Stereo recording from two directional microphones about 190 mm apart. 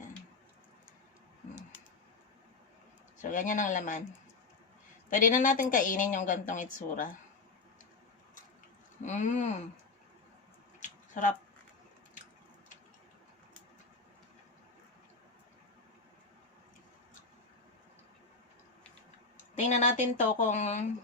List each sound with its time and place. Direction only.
3.2 s a woman's voice: 40° left (ahead or behind)
5.0 s a woman's voice: 45° left (ahead or behind)
9.0 s speech: 40° left (ahead or behind)
10.8 s a sound: 40° left (ahead or behind)
19.5 s speech: 40° left (ahead or behind)